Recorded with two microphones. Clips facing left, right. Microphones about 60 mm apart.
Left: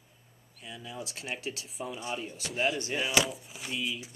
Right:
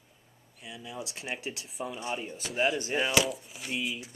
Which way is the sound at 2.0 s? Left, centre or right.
Centre.